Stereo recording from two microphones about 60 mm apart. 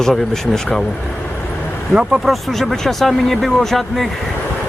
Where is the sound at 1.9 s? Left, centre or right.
Centre.